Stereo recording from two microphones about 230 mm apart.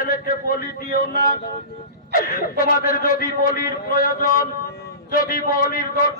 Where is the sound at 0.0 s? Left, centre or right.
Left.